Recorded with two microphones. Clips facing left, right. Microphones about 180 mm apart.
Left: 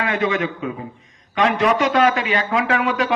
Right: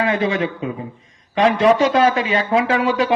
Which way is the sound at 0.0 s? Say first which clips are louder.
Right 2 dB; 25° right (ahead or behind).